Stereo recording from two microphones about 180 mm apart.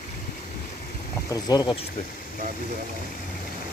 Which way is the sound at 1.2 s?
20° left (ahead or behind).